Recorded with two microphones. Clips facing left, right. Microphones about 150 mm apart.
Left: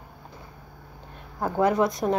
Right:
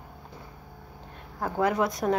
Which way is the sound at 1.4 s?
5° right (ahead or behind).